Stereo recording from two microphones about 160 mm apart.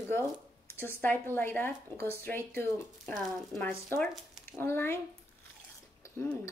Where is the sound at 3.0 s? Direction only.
Centre (ahead or behind).